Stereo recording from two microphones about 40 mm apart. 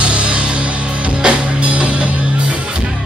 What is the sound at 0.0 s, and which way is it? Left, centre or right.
Music, right.